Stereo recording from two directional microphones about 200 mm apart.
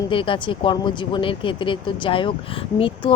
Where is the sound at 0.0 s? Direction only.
25° left (ahead or behind).